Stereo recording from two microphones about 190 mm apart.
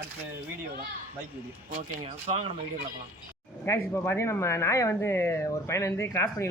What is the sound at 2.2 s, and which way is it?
Speech, 35° right (ahead or behind).